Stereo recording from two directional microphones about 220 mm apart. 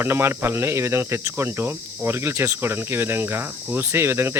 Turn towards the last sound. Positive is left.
turn(degrees=-10)  # may be behind; listen again after turning